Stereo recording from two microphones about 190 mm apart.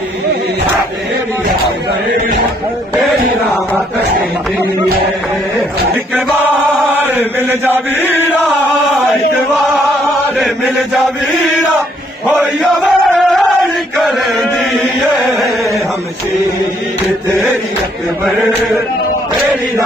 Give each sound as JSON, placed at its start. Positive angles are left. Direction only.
{"t": 7.2, "sound": "chant", "side_deg": -10}
{"t": 12.3, "sound": "chant", "side_deg": -5}